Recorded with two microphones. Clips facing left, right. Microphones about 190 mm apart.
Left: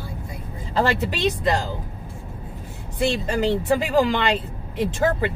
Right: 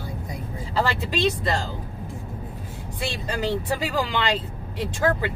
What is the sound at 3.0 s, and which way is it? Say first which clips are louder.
Speech: left 6 dB; 20° left (ahead or behind).